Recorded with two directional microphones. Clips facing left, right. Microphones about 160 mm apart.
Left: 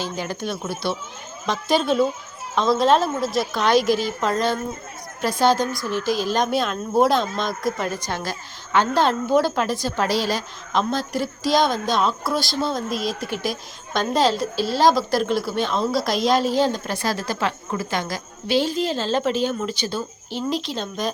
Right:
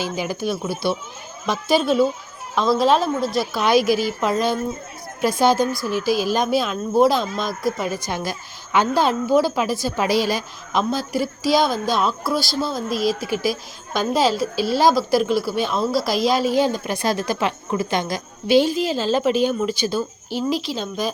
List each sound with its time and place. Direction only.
0.0 s a woman's voice: 10° right (ahead or behind)